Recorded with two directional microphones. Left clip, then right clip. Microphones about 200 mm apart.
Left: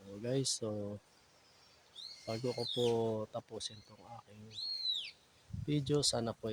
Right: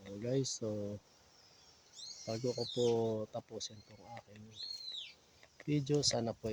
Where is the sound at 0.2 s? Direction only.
5° left (ahead or behind).